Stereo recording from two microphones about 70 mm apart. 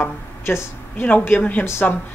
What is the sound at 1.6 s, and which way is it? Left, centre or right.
Speech, left.